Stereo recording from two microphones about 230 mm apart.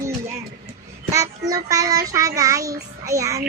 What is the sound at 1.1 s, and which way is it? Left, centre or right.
Child singing, centre.